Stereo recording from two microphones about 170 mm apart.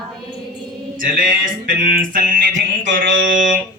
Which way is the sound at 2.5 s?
90° right.